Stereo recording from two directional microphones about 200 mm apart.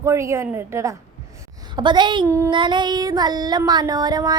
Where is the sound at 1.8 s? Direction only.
20° right (ahead or behind).